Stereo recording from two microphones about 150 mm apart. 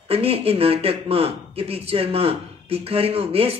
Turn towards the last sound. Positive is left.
turn(degrees=-40)  # may be behind; listen again after turning